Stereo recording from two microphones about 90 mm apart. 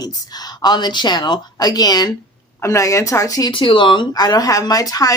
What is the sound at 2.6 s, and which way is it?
Speech, 35° left (ahead or behind).